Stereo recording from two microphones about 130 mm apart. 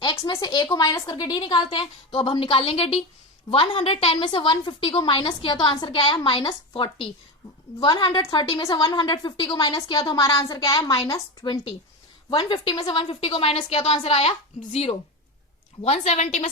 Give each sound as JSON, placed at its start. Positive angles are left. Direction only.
{"t": 0.0, "sound": "a woman's voice", "side_deg": 35}